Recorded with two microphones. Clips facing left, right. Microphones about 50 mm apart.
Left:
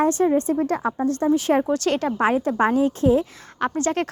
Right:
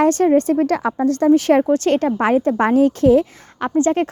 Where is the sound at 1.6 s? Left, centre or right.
Right.